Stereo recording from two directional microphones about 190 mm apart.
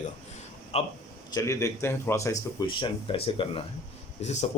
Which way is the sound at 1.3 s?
15° left (ahead or behind).